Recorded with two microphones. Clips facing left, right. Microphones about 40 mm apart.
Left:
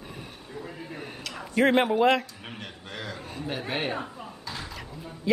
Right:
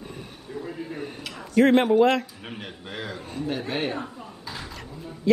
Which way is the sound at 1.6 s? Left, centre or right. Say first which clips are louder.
Right 4 dB; centre.